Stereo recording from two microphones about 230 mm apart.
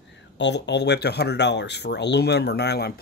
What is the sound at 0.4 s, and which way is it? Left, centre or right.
Speech, left.